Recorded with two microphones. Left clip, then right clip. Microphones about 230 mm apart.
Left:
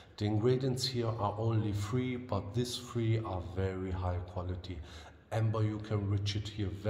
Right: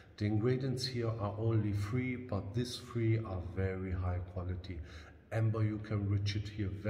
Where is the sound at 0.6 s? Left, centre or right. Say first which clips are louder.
Left 4 dB; right.